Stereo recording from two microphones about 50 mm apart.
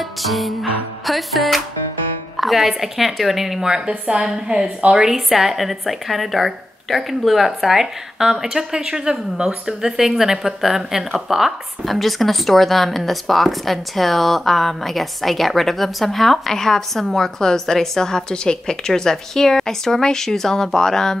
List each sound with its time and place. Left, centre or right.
0.0 s music: centre
2.3 s a woman's voice: centre
3.6 s a woman's voice: centre